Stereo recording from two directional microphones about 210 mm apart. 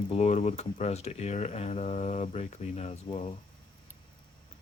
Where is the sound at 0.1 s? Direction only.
30° left (ahead or behind).